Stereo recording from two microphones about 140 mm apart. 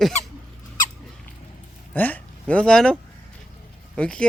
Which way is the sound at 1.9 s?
10° left (ahead or behind).